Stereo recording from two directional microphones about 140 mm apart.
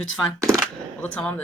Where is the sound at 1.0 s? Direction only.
10° left (ahead or behind).